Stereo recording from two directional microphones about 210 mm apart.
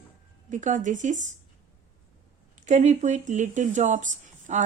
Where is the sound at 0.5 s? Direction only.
35° right (ahead or behind).